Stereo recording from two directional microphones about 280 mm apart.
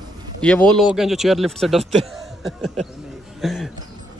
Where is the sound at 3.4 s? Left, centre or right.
Centre.